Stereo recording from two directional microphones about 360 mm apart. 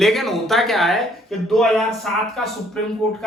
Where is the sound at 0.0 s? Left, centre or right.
Centre.